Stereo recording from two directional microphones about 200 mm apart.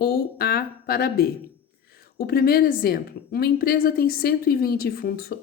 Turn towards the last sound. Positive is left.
turn(degrees=50)  # may be behind; listen again after turning